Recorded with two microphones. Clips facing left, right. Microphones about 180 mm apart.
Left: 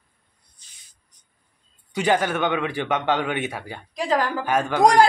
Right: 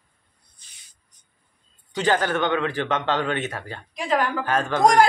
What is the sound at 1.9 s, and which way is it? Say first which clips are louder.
A man's voice: left 1 dB; 10° left (ahead or behind).